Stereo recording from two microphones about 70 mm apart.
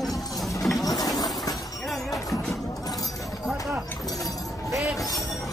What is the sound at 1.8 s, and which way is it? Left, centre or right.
Music, centre.